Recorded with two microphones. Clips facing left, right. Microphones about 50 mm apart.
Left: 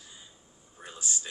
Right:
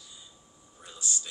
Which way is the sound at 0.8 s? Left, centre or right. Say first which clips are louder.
Even; left.